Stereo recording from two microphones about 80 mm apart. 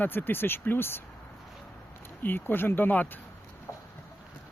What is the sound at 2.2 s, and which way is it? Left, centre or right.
Speech, left.